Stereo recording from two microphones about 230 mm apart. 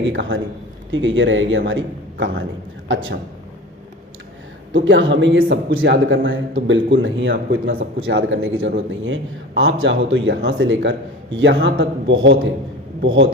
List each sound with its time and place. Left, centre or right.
0.0 s a man's voice: right
4.7 s a man's voice: right